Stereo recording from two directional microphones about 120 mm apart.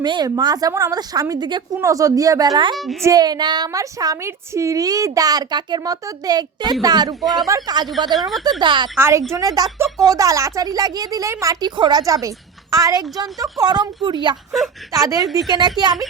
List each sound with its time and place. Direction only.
0.0 s a woman's voice: 40° right (ahead or behind)
2.7 s a woman's voice: centre (ahead or behind)
3.0 s a woman's voice: 30° right (ahead or behind)
9.0 s a woman's voice: 20° right (ahead or behind); by 16.0 s 40° right (ahead or behind)